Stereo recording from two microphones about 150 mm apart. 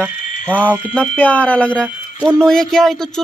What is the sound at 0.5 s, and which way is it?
Speech, 10° left (ahead or behind).